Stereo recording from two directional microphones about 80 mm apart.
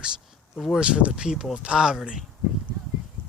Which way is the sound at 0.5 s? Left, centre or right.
Centre.